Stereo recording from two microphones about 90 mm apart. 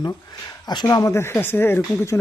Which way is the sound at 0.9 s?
40° left (ahead or behind).